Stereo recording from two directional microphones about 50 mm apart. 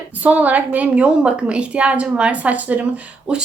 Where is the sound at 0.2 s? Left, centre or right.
Right.